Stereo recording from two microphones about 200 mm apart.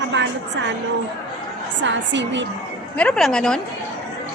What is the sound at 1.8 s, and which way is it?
Speech, 65° right (ahead or behind).